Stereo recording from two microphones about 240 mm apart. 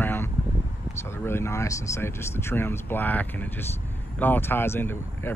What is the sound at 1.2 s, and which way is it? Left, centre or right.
Speech, centre.